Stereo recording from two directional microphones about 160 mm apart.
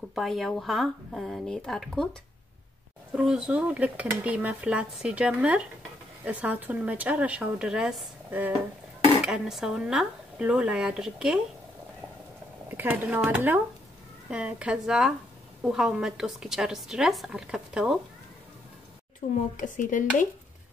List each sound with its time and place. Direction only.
0.1 s a woman's voice: centre (ahead or behind)
3.2 s dishes: 5° right (ahead or behind)
9.2 s a woman's voice: 5° right (ahead or behind)
12.6 s dishes: 10° right (ahead or behind)
14.3 s a woman's voice: 5° right (ahead or behind)
19.5 s speech: 55° left (ahead or behind)